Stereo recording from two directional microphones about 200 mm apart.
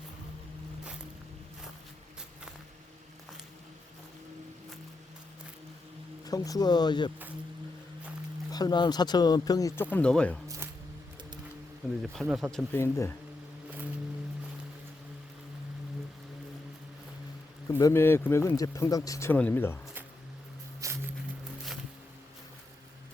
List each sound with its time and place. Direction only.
6.2 s speech: 20° left (ahead or behind)
8.4 s speech: 20° left (ahead or behind)
10.6 s music: 10° right (ahead or behind)
12.1 s speech: centre (ahead or behind)
17.7 s speech: 15° left (ahead or behind)
20.8 s a sound: 15° right (ahead or behind)